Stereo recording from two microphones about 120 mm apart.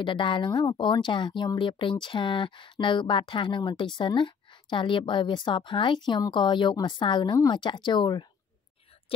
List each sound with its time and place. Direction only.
0.0 s speech: 45° left (ahead or behind)